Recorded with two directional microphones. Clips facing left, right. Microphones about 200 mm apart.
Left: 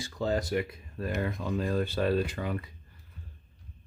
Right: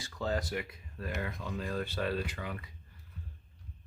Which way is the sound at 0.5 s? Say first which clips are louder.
Left 7 dB; 35° left (ahead or behind).